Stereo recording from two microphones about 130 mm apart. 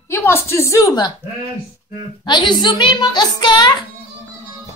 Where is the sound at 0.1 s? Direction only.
20° left (ahead or behind).